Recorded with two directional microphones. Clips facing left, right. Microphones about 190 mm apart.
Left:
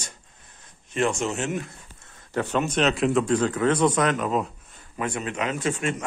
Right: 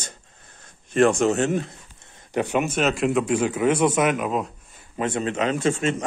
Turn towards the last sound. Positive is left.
turn(degrees=-25)  # may be behind; listen again after turning